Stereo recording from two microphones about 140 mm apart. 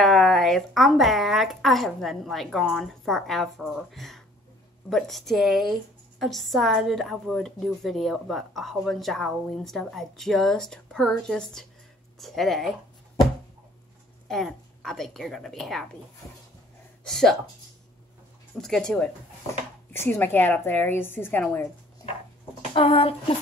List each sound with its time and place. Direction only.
0.0 s a woman's voice: centre (ahead or behind)
14.2 s a woman's voice: 5° left (ahead or behind)
17.0 s a woman's voice: 5° left (ahead or behind)
18.6 s a woman's voice: 5° left (ahead or behind)
22.8 s speech: 40° left (ahead or behind)